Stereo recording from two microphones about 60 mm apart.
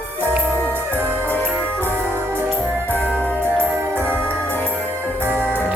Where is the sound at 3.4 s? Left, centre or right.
Right.